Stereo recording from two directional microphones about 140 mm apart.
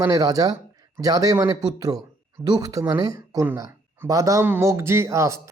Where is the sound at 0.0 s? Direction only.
25° right (ahead or behind).